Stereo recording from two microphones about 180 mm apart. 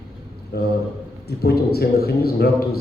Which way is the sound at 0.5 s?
60° left (ahead or behind).